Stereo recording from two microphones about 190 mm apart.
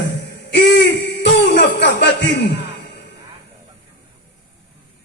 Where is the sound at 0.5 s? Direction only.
65° left (ahead or behind).